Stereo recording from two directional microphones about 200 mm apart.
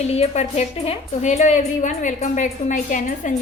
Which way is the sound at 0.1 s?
30° left (ahead or behind).